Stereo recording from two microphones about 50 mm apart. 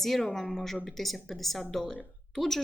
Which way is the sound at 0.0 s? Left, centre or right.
Centre.